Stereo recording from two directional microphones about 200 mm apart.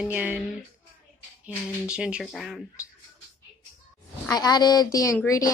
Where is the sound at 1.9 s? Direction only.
5° right (ahead or behind).